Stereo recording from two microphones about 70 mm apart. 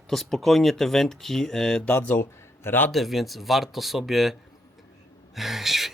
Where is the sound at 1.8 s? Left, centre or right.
Left.